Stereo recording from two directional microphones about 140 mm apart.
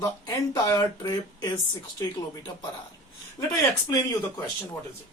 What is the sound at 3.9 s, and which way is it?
Speech, 20° left (ahead or behind).